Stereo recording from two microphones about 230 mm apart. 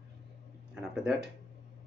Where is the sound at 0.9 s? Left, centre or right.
Centre.